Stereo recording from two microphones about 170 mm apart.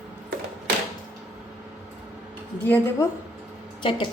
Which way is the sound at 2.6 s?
10° left (ahead or behind).